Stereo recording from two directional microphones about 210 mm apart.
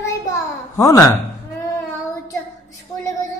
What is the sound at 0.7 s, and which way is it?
Speech, 15° left (ahead or behind).